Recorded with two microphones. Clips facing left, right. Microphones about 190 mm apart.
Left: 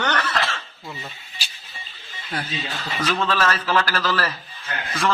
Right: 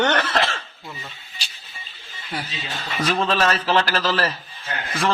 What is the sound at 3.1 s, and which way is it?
Speech, 30° right (ahead or behind).